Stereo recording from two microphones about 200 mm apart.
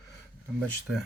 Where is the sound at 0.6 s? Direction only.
Centre (ahead or behind).